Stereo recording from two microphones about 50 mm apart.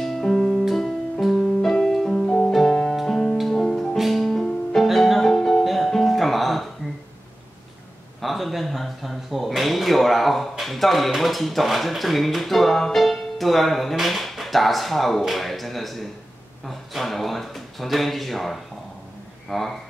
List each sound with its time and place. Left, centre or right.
0.0 s music: centre
3.6 s music: centre
3.9 s music: centre
8.2 s a sound: centre
10.6 s speech: centre
16.6 s a sound: centre
19.5 s speech: centre